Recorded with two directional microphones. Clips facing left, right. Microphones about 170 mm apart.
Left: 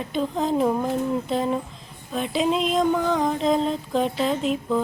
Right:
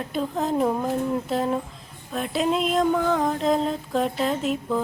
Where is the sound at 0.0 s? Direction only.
Centre (ahead or behind).